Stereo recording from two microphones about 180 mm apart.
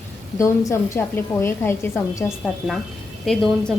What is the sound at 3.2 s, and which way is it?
Speech, centre (ahead or behind).